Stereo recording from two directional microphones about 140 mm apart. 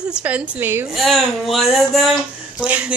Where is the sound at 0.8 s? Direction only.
Centre (ahead or behind).